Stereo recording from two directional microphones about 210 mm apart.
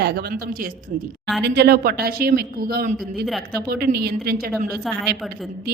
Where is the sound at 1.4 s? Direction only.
50° right (ahead or behind).